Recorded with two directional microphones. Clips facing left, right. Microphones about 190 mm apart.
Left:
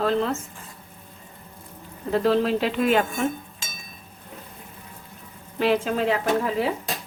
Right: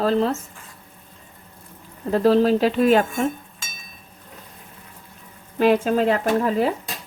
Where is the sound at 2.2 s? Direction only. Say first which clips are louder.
Right 6 dB; 40° right (ahead or behind).